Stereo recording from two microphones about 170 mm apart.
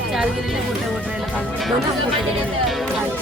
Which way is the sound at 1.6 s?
Centre (ahead or behind).